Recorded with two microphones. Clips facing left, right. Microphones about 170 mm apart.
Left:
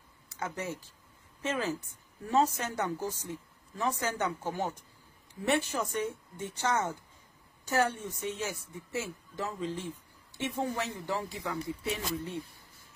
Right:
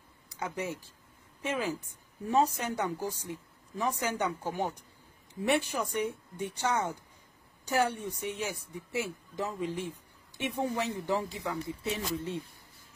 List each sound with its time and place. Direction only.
0.3 s speech: 15° right (ahead or behind)